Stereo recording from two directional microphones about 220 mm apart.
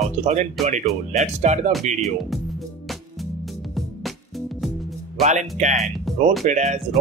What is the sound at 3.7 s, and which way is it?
Music, centre (ahead or behind).